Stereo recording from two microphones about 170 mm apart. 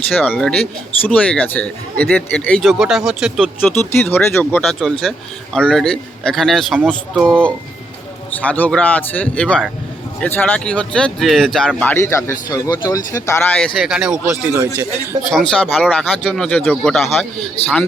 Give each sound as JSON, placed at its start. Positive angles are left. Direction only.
{"t": 0.1, "sound": "speech", "side_deg": 10}
{"t": 3.6, "sound": "speech", "side_deg": 10}
{"t": 13.7, "sound": "speech", "side_deg": -5}